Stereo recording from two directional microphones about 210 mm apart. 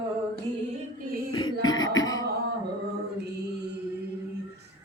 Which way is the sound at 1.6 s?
20° left (ahead or behind).